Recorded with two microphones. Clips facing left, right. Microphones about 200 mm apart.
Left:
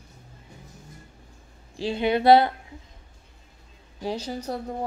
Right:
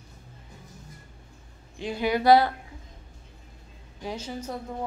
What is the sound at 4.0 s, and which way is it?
Speech, 35° left (ahead or behind).